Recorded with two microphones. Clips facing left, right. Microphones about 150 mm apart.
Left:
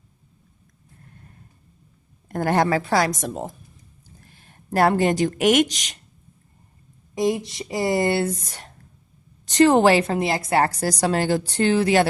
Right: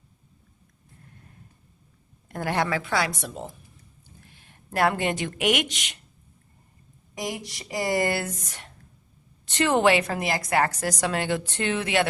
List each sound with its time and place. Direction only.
2.3 s a woman's voice: 45° left (ahead or behind)
7.2 s a woman's voice: 25° left (ahead or behind)